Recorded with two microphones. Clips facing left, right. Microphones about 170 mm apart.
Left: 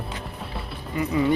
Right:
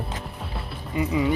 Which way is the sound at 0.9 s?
15° right (ahead or behind).